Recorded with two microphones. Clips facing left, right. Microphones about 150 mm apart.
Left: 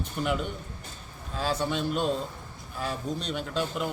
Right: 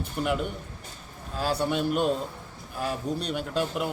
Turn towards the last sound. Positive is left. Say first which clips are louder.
# right 2 dB
turn(degrees=-5)  # may be behind; listen again after turning